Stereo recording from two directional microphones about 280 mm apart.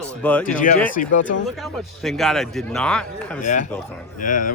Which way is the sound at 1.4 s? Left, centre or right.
Centre.